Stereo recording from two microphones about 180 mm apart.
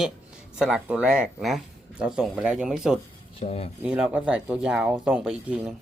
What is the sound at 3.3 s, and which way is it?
Speech, 35° left (ahead or behind).